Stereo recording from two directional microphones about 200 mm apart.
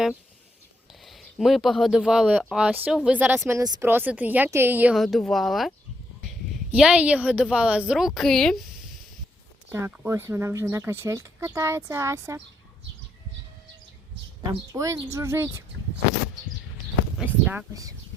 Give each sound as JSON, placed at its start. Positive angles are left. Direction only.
{"t": 1.0, "sound": "speech", "side_deg": 0}
{"t": 9.6, "sound": "speech", "side_deg": -10}
{"t": 14.7, "sound": "speech", "side_deg": -15}
{"t": 17.2, "sound": "speech", "side_deg": -5}